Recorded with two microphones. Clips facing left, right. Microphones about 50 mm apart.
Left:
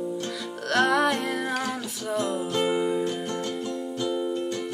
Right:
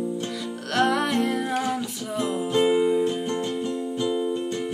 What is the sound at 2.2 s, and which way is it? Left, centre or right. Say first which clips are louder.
Music: right 3 dB; centre.